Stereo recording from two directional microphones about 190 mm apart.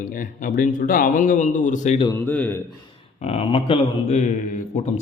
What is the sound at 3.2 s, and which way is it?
A man's voice, 30° left (ahead or behind).